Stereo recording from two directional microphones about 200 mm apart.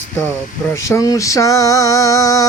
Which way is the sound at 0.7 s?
15° left (ahead or behind).